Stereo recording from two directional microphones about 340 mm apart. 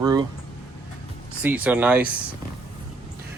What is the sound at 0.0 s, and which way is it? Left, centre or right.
Speech, centre.